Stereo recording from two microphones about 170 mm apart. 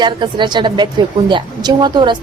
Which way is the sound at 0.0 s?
25° right (ahead or behind).